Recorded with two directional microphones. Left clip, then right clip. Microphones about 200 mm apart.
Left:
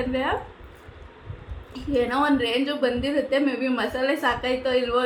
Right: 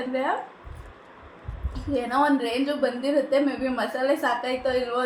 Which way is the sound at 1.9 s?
20° left (ahead or behind).